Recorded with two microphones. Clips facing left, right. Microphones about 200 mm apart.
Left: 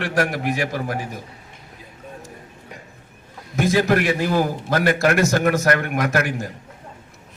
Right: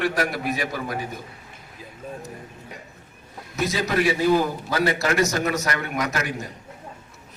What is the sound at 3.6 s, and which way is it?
A man's voice, 50° left (ahead or behind).